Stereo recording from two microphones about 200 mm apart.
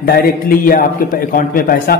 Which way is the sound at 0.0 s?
45° left (ahead or behind).